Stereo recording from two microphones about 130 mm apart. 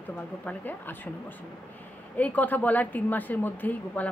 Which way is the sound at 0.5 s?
15° left (ahead or behind).